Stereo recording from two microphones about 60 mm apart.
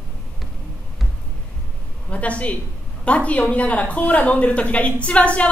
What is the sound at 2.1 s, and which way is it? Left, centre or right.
Speech, left.